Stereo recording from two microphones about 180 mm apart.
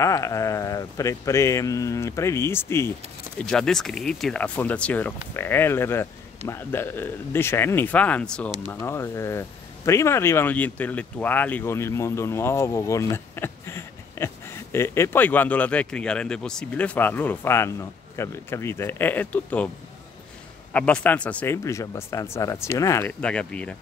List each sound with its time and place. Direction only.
0.0 s speech: 15° left (ahead or behind)
20.7 s speech: 5° left (ahead or behind)